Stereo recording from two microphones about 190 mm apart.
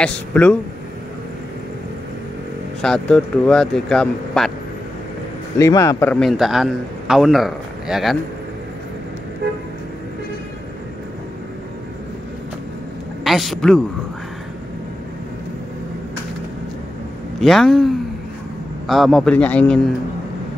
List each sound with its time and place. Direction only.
0.0 s a man's voice: 5° left (ahead or behind)
2.8 s a man's voice: 5° left (ahead or behind)
5.6 s a man's voice: 15° left (ahead or behind); by 8.2 s centre (ahead or behind)
13.2 s a man's voice: centre (ahead or behind)
17.4 s a man's voice: centre (ahead or behind)